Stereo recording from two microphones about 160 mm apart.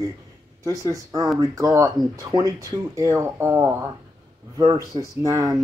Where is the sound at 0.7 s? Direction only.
20° right (ahead or behind).